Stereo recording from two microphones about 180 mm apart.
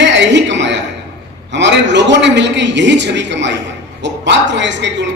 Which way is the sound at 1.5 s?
80° right.